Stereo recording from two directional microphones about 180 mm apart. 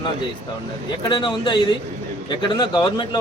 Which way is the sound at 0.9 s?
25° left (ahead or behind).